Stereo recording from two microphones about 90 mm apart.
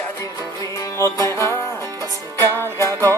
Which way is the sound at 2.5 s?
35° right (ahead or behind).